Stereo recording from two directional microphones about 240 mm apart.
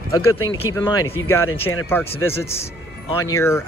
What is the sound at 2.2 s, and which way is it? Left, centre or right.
Speech, centre.